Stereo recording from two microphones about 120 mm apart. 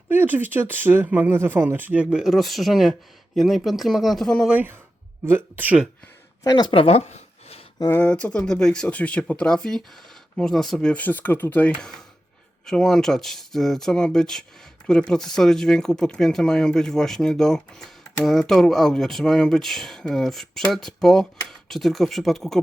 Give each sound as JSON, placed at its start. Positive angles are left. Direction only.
{"t": 0.1, "sound": "speech", "side_deg": -15}
{"t": 4.4, "sound": "speech", "side_deg": -15}
{"t": 6.4, "sound": "speech", "side_deg": 35}
{"t": 7.8, "sound": "speech", "side_deg": 20}